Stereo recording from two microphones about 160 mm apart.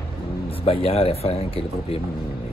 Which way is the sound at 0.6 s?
35° left (ahead or behind).